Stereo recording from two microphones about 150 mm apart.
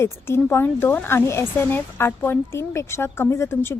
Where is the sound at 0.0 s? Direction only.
15° left (ahead or behind).